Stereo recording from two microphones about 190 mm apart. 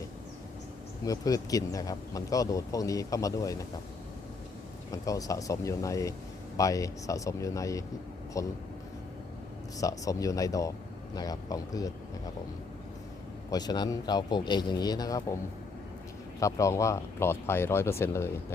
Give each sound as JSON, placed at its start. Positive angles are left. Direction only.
{"t": 1.0, "sound": "speech", "side_deg": 20}
{"t": 4.9, "sound": "speech", "side_deg": 20}
{"t": 9.7, "sound": "speech", "side_deg": 20}
{"t": 13.5, "sound": "speech", "side_deg": 20}
{"t": 16.4, "sound": "speech", "side_deg": 15}